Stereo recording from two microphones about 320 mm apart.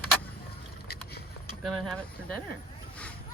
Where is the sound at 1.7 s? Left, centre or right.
Centre.